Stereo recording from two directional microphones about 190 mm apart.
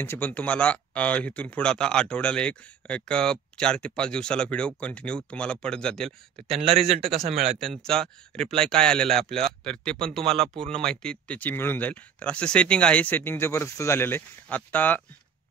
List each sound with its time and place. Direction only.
0.0 s speech: 10° left (ahead or behind)
6.5 s a man's voice: 30° right (ahead or behind)
7.5 s speech: centre (ahead or behind)
10.2 s speech: 30° right (ahead or behind)
10.8 s speech: 5° left (ahead or behind)